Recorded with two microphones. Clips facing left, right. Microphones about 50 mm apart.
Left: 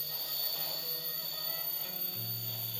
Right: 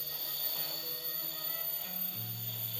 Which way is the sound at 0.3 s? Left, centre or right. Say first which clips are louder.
Left 2 dB; centre.